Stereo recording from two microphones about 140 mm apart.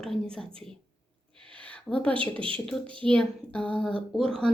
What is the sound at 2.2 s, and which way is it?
Speech, 40° right (ahead or behind).